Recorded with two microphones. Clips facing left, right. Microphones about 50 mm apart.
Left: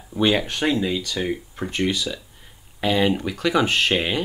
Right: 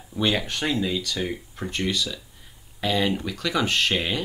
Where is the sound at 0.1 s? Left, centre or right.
Centre.